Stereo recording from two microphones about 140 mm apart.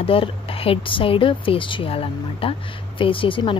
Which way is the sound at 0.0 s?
40° left (ahead or behind).